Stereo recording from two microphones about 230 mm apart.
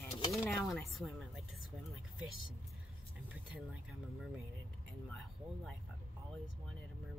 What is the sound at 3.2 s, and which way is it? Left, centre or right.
Speech, centre.